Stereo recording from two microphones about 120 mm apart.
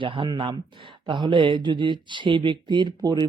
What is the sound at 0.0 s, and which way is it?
Speech, 45° right (ahead or behind).